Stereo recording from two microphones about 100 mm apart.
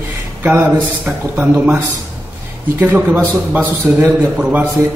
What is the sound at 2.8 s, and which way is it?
A man's voice, 20° right (ahead or behind).